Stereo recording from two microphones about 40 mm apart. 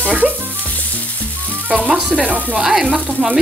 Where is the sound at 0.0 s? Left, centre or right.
Right.